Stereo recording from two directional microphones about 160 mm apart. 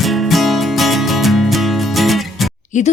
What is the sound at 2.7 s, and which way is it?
Speech, 50° left (ahead or behind).